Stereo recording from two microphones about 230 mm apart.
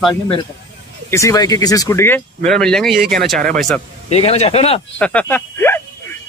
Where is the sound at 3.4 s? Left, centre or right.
Right.